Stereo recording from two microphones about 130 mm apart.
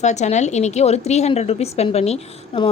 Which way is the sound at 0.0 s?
60° left (ahead or behind).